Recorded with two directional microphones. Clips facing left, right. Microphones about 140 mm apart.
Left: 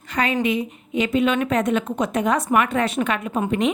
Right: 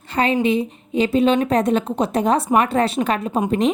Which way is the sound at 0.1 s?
30° right (ahead or behind).